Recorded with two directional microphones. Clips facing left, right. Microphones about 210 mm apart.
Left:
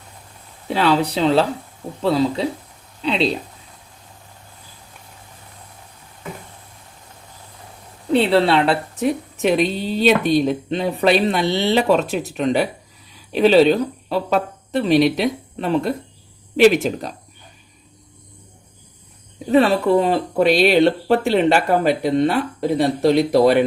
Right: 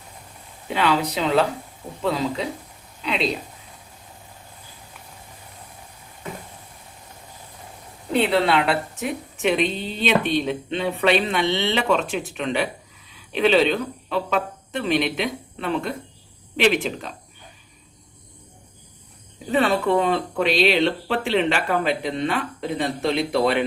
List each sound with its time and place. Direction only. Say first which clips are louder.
0.7 s a woman's voice: left 4 dB; 35° left (ahead or behind)
8.1 s a woman's voice: left 4 dB; 30° left (ahead or behind)
19.5 s a woman's voice: left 5 dB; 35° left (ahead or behind)